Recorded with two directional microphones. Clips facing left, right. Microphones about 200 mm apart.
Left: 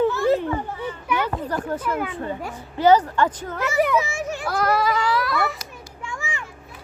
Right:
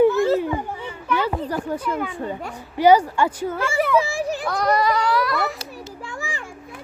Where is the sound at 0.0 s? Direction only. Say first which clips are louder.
Right 3 dB; 15° right (ahead or behind).